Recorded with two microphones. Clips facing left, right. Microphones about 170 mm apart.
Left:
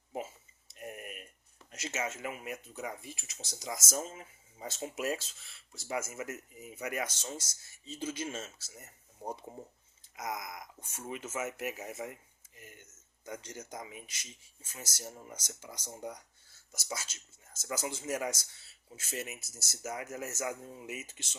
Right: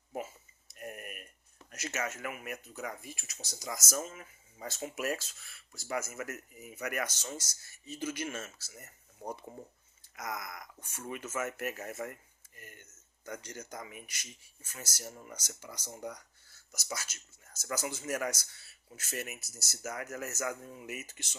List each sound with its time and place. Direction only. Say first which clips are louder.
0.7 s tick: even; 20° left (ahead or behind)
1.7 s speech: even; 25° left (ahead or behind)
10.2 s speech: left 1 dB; 20° left (ahead or behind)
13.2 s speech: even; 20° left (ahead or behind)